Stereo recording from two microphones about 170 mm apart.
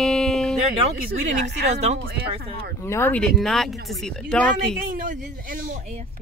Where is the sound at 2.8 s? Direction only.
15° left (ahead or behind).